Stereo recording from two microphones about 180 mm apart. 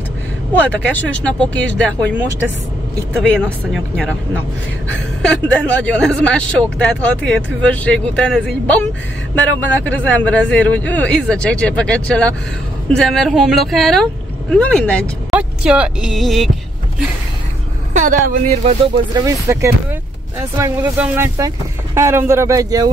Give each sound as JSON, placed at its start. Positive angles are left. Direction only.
{"t": 0.5, "sound": "speech", "side_deg": 10}
{"t": 3.9, "sound": "speech", "side_deg": 5}
{"t": 15.3, "sound": "speech", "side_deg": -5}
{"t": 17.9, "sound": "speech", "side_deg": -45}
{"t": 19.1, "sound": "speech", "side_deg": -15}